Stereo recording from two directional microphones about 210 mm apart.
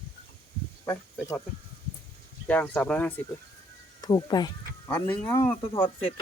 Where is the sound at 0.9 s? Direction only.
15° left (ahead or behind).